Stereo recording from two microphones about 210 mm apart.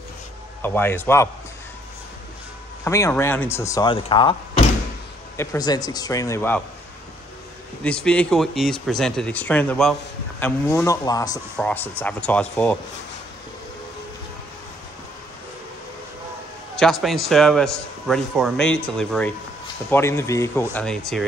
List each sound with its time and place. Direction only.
0.6 s speech: 10° left (ahead or behind)
2.8 s speech: 15° left (ahead or behind)
7.8 s speech: 5° left (ahead or behind)
11.5 s speech: 5° left (ahead or behind)
16.7 s speech: centre (ahead or behind)
20.7 s speech: 5° left (ahead or behind)